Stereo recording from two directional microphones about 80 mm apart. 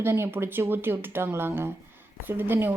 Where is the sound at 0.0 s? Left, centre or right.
Right.